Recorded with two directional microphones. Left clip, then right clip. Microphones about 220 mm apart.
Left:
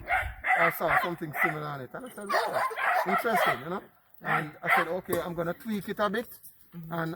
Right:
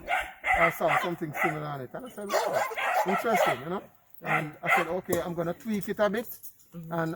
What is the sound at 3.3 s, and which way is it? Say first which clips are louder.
Speech: right 2 dB; 50° right (ahead or behind).